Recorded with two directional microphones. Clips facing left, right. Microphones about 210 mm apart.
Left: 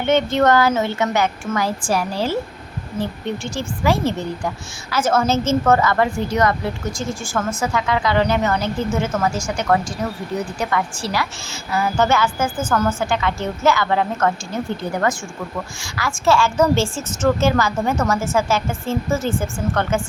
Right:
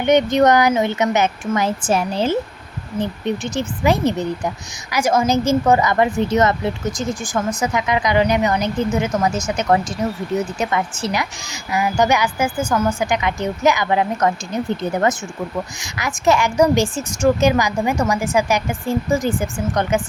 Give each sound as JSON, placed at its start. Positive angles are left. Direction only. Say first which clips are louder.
{"t": 0.0, "sound": "a woman's voice", "louder": "right 3 dB", "side_deg": -15}